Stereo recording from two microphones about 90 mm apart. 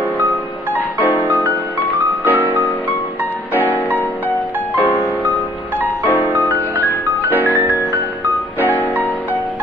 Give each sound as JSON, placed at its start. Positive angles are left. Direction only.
{"t": 1.0, "sound": "music", "side_deg": 20}
{"t": 2.2, "sound": "music", "side_deg": -20}
{"t": 6.0, "sound": "music", "side_deg": 20}
{"t": 8.5, "sound": "music", "side_deg": 20}